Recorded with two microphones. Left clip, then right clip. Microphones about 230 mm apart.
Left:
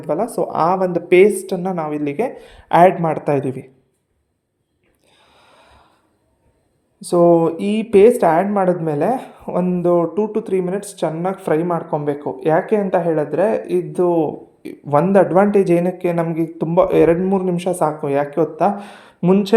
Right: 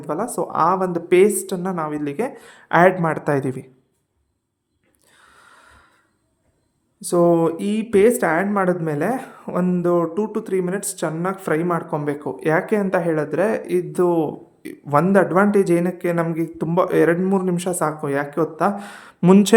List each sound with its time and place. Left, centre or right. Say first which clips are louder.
0.0 s speech: left 4 dB; centre
5.0 s gasp: right 1 dB; centre
7.0 s speech: left 4 dB; centre
19.2 s speech: right 1 dB; centre